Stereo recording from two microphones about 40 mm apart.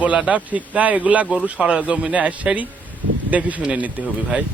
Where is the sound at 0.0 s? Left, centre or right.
Right.